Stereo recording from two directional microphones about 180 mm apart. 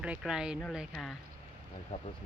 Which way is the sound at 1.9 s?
35° left (ahead or behind).